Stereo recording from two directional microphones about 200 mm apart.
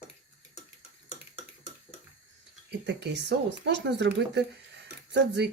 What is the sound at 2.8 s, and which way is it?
Speech, 60° right (ahead or behind).